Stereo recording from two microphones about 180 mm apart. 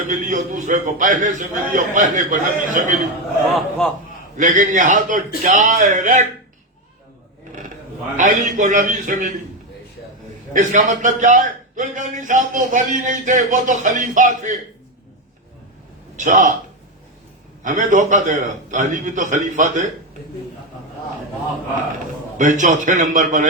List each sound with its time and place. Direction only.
0.1 s a man's voice: 45° right (ahead or behind)
3.5 s a man's voice: centre (ahead or behind)
4.4 s a man's voice: 45° right (ahead or behind)
8.1 s a man's voice: 45° right (ahead or behind)
10.5 s a man's voice: 45° right (ahead or behind)
16.1 s a man's voice: 45° right (ahead or behind)
17.6 s a man's voice: 45° right (ahead or behind)
22.4 s a man's voice: 45° right (ahead or behind)